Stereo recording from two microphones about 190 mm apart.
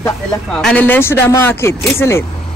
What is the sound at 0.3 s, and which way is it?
Speech, 5° left (ahead or behind).